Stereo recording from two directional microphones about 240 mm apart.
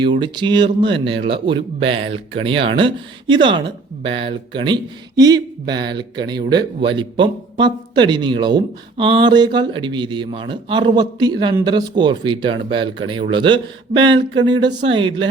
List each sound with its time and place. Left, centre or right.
0.0 s speech: centre